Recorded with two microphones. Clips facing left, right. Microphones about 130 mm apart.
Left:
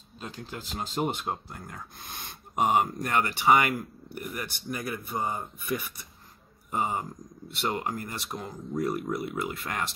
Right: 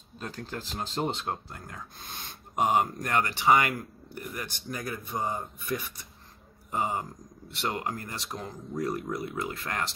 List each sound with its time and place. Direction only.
0.2 s speech: 5° left (ahead or behind)
6.7 s speech: 15° left (ahead or behind)